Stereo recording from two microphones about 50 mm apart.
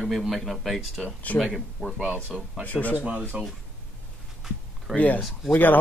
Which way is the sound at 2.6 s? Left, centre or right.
Left.